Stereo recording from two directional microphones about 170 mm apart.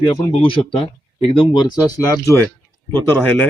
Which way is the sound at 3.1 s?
10° left (ahead or behind).